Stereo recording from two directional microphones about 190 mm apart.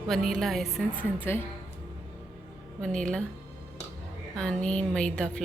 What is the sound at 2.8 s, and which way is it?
Speech, 5° left (ahead or behind).